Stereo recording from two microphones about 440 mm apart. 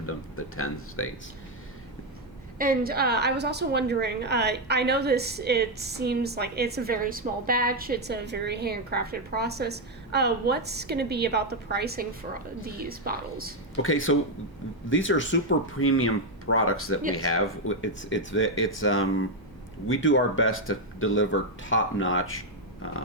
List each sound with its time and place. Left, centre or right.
0.0 s speech: left
2.6 s a woman's voice: centre
13.8 s speech: left